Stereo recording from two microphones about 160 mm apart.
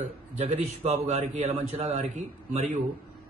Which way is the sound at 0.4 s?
45° right (ahead or behind).